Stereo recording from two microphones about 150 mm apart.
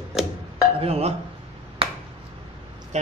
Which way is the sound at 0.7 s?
40° right (ahead or behind).